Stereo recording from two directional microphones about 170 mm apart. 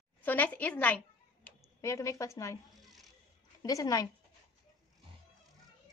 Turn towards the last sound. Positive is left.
turn(degrees=20)  # may be behind; listen again after turning